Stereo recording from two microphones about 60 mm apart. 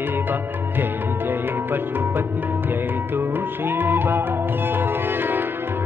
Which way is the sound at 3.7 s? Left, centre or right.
Right.